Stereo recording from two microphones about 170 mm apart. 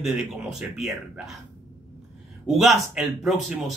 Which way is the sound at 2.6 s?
Centre (ahead or behind).